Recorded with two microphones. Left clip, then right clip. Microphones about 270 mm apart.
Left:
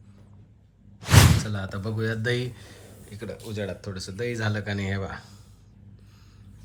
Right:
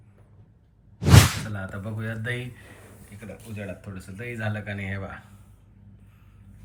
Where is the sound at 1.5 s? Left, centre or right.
Centre.